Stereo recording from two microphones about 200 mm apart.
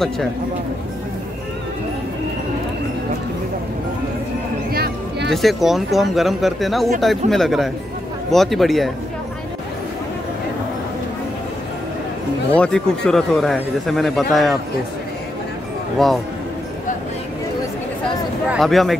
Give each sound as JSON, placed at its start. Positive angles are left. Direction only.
{"t": 4.7, "sound": "a sound", "side_deg": -50}
{"t": 5.3, "sound": "a man's voice", "side_deg": 0}
{"t": 12.5, "sound": "a man's voice", "side_deg": 5}
{"t": 16.0, "sound": "a man's voice", "side_deg": 0}
{"t": 18.5, "sound": "a man's voice", "side_deg": 0}